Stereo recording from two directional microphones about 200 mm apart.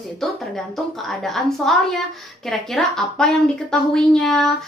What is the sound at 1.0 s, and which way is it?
A woman's voice, centre (ahead or behind).